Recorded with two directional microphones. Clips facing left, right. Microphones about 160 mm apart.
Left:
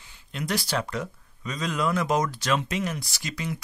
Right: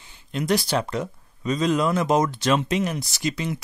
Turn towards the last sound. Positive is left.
turn(degrees=-25)  # may be behind; listen again after turning